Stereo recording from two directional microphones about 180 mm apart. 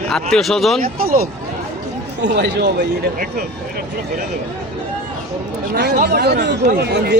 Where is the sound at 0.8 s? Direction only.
55° right (ahead or behind).